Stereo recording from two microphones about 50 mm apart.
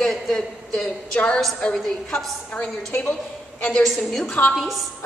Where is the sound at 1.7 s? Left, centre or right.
Centre.